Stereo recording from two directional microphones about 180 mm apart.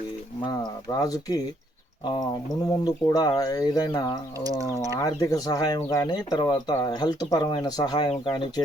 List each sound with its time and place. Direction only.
0.4 s speech: 20° left (ahead or behind)
2.6 s speech: 20° left (ahead or behind)
4.4 s speech: 20° right (ahead or behind)
4.9 s speech: 20° left (ahead or behind)